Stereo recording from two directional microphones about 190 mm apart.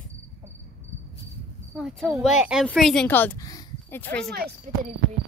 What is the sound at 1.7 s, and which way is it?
Speech, 5° right (ahead or behind).